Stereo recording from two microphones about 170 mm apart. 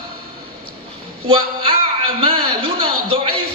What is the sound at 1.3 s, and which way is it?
Speech, 30° right (ahead or behind).